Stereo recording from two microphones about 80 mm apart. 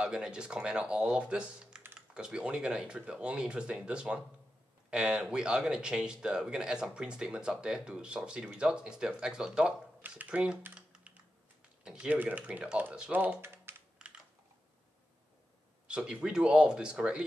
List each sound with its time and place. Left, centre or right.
0.0 s speech: centre
10.7 s typing: centre
12.2 s speech: centre
15.9 s speech: centre